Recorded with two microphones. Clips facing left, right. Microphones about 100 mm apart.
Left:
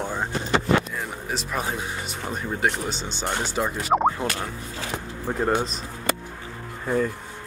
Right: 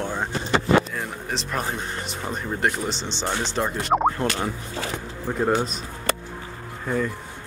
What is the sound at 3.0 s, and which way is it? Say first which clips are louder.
Speech: right 1 dB; 50° left (ahead or behind).